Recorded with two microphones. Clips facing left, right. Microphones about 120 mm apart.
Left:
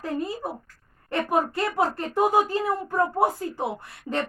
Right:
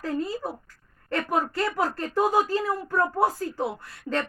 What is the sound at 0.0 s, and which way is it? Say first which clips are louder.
Speech: even; 20° left (ahead or behind).